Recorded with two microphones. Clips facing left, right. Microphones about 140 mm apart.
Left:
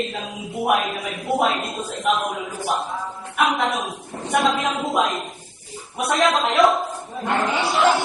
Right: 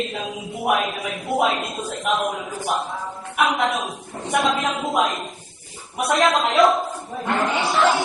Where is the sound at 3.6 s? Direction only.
Centre (ahead or behind).